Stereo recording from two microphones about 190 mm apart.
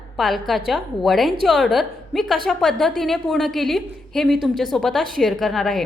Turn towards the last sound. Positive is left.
turn(degrees=0)  # may be behind; listen again after turning